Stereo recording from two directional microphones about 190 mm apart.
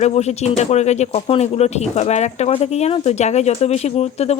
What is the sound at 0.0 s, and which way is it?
Speech, 35° left (ahead or behind).